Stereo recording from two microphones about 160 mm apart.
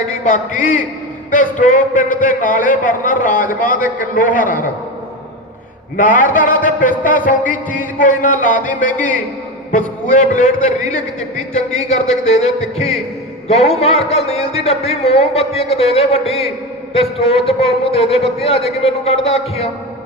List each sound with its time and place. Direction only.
0.1 s a man's voice: 50° left (ahead or behind)
6.0 s a man's voice: 55° left (ahead or behind); by 19.7 s 40° left (ahead or behind)